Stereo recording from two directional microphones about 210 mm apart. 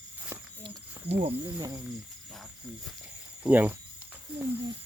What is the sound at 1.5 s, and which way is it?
Speech, 15° right (ahead or behind).